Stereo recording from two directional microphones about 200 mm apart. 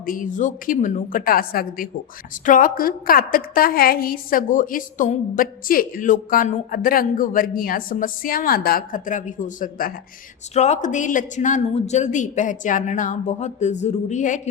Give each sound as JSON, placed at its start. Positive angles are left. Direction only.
{"t": 0.0, "sound": "a woman's voice", "side_deg": 45}